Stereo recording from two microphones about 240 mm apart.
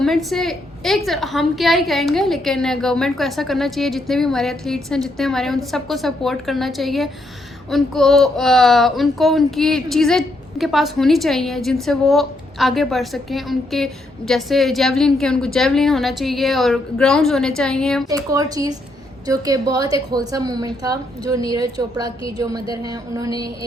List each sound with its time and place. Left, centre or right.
0.0 s a child's voice: centre
18.1 s a woman's voice: centre